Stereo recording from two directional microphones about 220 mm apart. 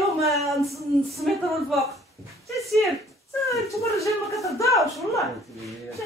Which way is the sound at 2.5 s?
Centre (ahead or behind).